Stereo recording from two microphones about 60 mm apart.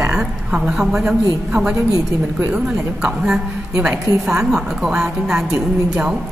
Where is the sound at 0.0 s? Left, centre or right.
Centre.